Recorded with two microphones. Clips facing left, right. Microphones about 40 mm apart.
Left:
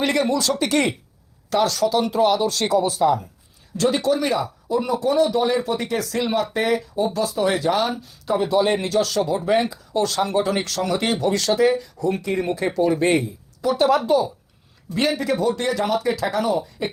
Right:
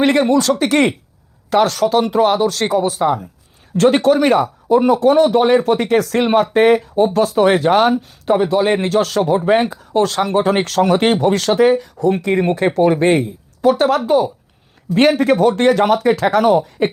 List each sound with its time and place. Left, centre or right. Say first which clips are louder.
0.0 s speech: right 7 dB; right
3.8 s speech: right 8 dB; right